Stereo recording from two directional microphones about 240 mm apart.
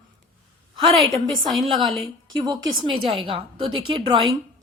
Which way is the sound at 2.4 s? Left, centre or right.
Centre.